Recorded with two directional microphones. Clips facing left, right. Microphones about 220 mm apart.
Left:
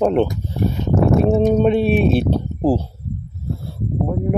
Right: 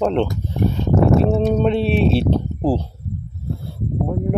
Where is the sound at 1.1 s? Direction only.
15° left (ahead or behind).